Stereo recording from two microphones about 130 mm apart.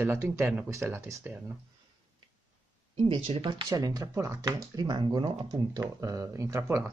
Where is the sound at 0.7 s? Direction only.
20° right (ahead or behind).